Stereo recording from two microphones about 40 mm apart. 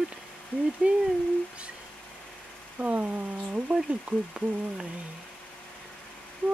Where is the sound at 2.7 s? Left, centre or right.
Right.